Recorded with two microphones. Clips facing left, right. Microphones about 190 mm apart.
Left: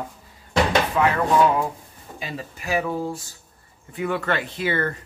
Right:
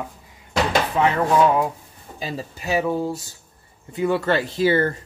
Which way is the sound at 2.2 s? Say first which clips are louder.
Right 4 dB; 35° right (ahead or behind).